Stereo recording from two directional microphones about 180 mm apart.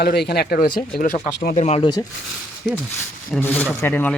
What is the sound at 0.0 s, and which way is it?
Speech, 65° left (ahead or behind).